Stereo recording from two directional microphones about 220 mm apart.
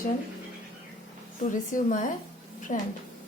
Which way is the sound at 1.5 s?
35° left (ahead or behind).